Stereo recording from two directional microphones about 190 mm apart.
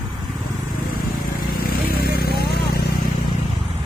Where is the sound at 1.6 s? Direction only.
50° left (ahead or behind).